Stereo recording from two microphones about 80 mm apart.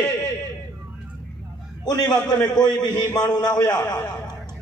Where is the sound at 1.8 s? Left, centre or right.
Left.